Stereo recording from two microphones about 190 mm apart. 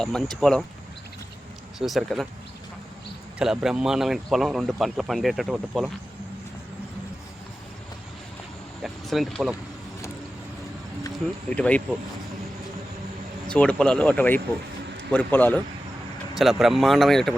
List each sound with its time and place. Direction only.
0.0 s speech: centre (ahead or behind)
1.8 s speech: centre (ahead or behind)
3.3 s speech: 5° right (ahead or behind)
8.8 s speech: centre (ahead or behind)
11.1 s speech: 5° left (ahead or behind)
13.5 s speech: 5° left (ahead or behind)
16.4 s speech: centre (ahead or behind)